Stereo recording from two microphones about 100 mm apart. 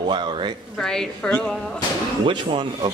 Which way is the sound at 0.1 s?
55° right (ahead or behind).